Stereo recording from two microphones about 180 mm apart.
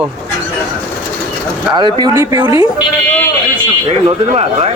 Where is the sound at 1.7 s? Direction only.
25° right (ahead or behind).